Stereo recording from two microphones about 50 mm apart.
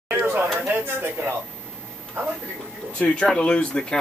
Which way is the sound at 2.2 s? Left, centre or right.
Right.